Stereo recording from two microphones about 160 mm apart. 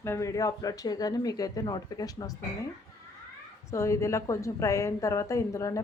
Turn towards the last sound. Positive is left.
turn(degrees=20)  # may be behind; listen again after turning